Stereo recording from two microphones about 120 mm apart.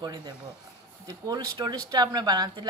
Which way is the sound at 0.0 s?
35° right (ahead or behind).